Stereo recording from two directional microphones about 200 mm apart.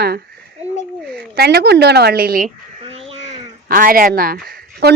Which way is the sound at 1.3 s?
55° right (ahead or behind).